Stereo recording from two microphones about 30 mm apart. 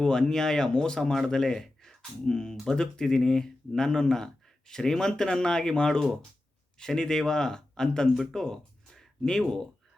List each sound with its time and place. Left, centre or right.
0.0 s speech: left
8.3 s a sound: centre
9.4 s speech: centre